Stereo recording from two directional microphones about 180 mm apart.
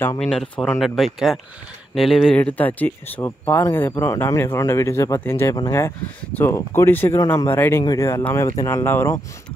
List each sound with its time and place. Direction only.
0.2 s speech: centre (ahead or behind)